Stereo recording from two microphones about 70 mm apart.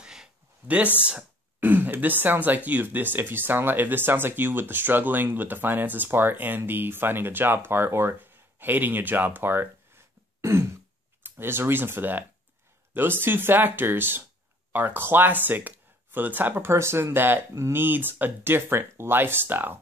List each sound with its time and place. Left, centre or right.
0.0 s a sound: centre
1.0 s speech: right
10.4 s speech: right